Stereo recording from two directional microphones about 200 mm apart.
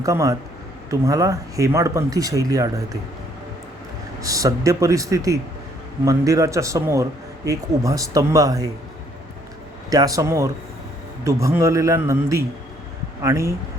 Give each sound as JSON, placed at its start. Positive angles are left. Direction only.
{"t": 0.0, "sound": "a man's voice", "side_deg": -15}
{"t": 4.2, "sound": "a man's voice", "side_deg": -15}
{"t": 9.9, "sound": "a man's voice", "side_deg": -20}